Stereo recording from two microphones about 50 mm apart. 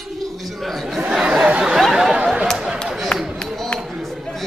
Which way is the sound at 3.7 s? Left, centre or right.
Centre.